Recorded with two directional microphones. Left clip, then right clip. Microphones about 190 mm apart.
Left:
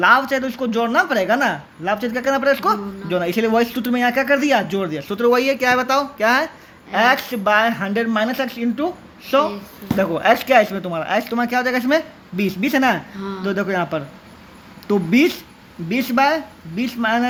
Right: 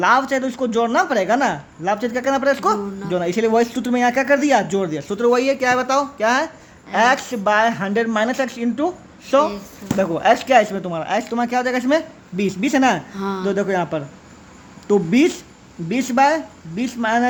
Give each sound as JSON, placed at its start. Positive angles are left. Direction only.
{"t": 0.0, "sound": "speech", "side_deg": -15}
{"t": 13.1, "sound": "speech", "side_deg": -65}
{"t": 13.4, "sound": "speech", "side_deg": -15}